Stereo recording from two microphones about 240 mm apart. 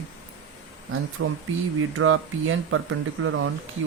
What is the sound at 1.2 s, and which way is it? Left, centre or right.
Speech, right.